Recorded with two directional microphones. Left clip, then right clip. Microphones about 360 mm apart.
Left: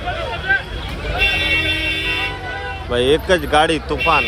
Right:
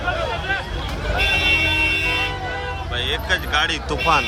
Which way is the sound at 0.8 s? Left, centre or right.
Right.